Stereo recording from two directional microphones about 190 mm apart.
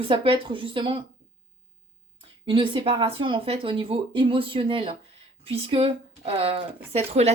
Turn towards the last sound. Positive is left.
turn(degrees=-35)  # may be behind; listen again after turning